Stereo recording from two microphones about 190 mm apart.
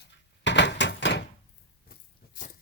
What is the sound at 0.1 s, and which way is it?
Door, 65° left (ahead or behind).